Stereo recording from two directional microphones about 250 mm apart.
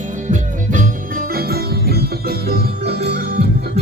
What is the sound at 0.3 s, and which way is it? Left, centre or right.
Music, right.